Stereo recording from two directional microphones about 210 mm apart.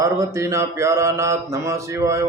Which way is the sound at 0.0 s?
15° right (ahead or behind).